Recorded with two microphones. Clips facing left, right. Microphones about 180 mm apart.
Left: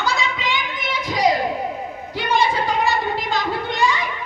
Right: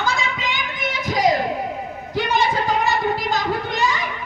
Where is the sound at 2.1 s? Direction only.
45° right (ahead or behind).